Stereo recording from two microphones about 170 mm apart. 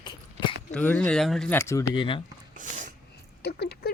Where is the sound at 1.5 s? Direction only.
15° left (ahead or behind).